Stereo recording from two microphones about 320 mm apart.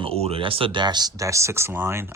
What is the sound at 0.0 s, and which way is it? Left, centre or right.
Speech, centre.